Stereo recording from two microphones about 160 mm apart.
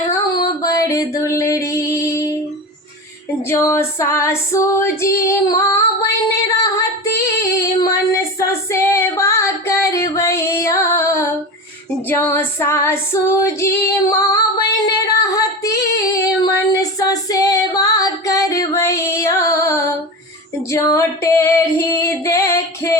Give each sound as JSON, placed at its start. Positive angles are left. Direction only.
{"t": 0.1, "sound": "music", "side_deg": 20}
{"t": 3.5, "sound": "female singing", "side_deg": 15}